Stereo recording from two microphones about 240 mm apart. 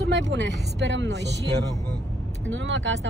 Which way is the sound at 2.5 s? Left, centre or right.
Right.